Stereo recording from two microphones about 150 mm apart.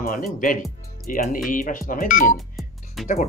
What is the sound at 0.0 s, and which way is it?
Speech, 70° left (ahead or behind).